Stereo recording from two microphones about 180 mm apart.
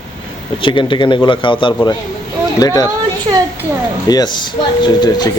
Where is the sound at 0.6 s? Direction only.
25° left (ahead or behind).